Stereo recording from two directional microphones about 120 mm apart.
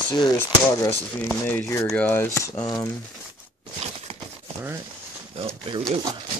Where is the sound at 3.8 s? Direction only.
70° right (ahead or behind).